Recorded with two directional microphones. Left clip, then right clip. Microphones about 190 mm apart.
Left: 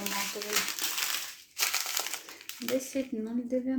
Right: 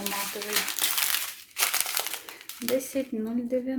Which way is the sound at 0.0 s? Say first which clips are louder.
Right 2 dB; centre (ahead or behind).